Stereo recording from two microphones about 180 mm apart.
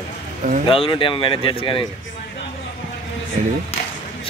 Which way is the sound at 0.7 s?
30° left (ahead or behind).